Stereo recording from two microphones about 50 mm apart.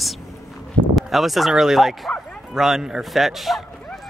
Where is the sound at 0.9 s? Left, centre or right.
Centre.